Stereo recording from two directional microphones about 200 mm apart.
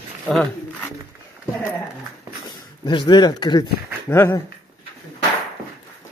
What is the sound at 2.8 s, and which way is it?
Speech, 20° left (ahead or behind).